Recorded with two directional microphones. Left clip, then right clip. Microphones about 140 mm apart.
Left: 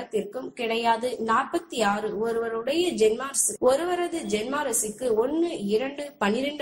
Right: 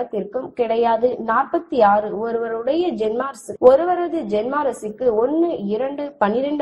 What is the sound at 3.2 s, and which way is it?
A woman's voice, 30° right (ahead or behind).